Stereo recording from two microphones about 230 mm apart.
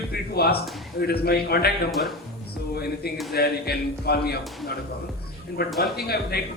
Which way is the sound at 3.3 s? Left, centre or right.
Left.